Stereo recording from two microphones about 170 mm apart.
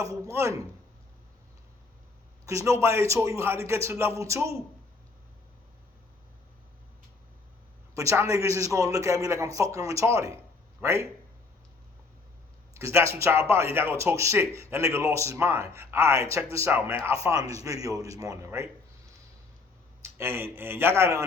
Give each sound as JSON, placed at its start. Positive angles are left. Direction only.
{"t": 0.3, "sound": "a man's voice", "side_deg": -15}
{"t": 2.5, "sound": "a man's voice", "side_deg": -15}
{"t": 7.9, "sound": "a man's voice", "side_deg": -15}
{"t": 12.7, "sound": "a man's voice", "side_deg": -15}
{"t": 20.1, "sound": "a man's voice", "side_deg": -15}